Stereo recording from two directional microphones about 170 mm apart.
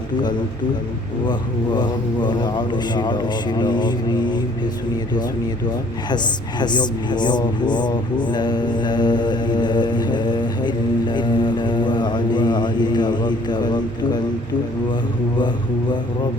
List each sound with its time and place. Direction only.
1.3 s a man's voice: 25° left (ahead or behind)
6.6 s speech: 25° left (ahead or behind)